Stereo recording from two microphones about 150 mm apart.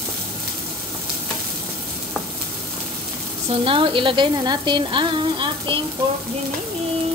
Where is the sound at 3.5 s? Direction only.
35° right (ahead or behind).